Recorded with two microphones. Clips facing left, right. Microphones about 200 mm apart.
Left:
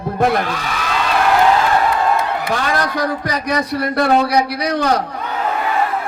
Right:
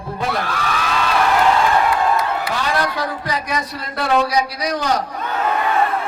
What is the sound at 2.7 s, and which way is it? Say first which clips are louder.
Speech: left 3 dB; 45° left (ahead or behind).